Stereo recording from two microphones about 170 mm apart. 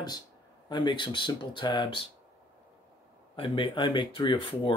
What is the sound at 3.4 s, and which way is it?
Speech, 30° left (ahead or behind).